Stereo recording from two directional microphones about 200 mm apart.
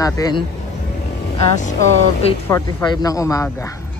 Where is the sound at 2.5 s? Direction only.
15° left (ahead or behind).